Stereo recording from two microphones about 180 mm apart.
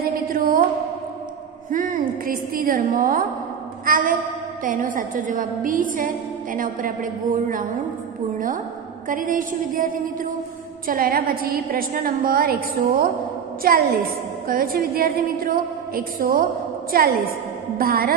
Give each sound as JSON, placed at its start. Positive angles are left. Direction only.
{"t": 0.0, "sound": "music", "side_deg": -55}
{"t": 1.7, "sound": "a woman's voice", "side_deg": -50}
{"t": 9.1, "sound": "a woman's voice", "side_deg": -50}
{"t": 10.9, "sound": "a woman's voice", "side_deg": -55}
{"t": 17.7, "sound": "a woman's voice", "side_deg": -55}